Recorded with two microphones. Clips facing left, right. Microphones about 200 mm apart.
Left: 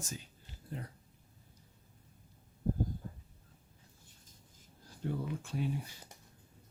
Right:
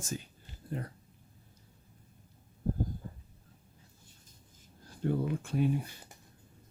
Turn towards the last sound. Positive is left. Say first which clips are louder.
# right 7 dB
turn(degrees=-60)  # may be behind; listen again after turning